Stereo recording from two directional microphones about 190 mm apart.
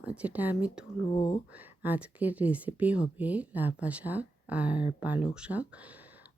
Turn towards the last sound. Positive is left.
turn(degrees=-5)  # may be behind; listen again after turning